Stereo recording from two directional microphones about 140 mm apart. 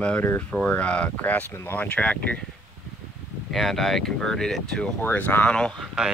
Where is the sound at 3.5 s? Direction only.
Centre (ahead or behind).